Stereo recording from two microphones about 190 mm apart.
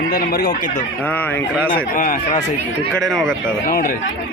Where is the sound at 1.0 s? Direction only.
10° left (ahead or behind).